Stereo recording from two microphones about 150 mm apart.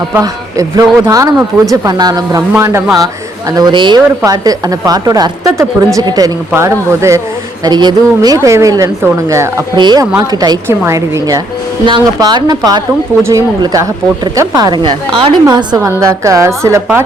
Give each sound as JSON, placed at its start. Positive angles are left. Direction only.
{"t": 0.2, "sound": "a woman's voice", "side_deg": -20}
{"t": 3.5, "sound": "a woman's voice", "side_deg": -30}
{"t": 7.6, "sound": "a woman's voice", "side_deg": -30}